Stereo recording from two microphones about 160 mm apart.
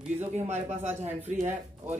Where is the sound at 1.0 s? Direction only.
45° right (ahead or behind).